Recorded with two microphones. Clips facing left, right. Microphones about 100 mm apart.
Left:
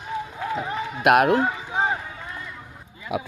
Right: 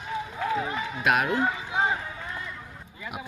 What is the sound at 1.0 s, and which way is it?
Speech, 65° left (ahead or behind).